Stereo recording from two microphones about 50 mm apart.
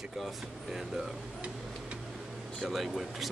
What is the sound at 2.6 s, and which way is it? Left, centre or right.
Speech, centre.